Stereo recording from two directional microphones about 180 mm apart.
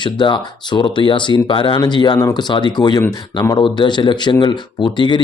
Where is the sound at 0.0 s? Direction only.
25° left (ahead or behind).